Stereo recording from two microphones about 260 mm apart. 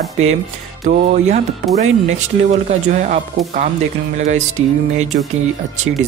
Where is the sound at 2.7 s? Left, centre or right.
Right.